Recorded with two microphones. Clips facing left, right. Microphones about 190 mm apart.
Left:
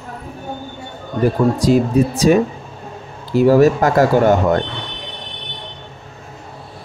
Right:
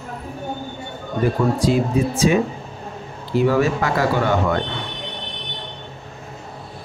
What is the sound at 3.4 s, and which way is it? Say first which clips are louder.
Speech: left 7 dB; 40° left (ahead or behind).